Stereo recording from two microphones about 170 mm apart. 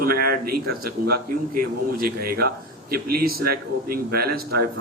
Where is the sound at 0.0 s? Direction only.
60° right (ahead or behind).